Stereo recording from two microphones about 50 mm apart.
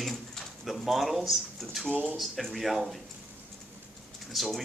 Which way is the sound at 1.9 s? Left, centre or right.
Right.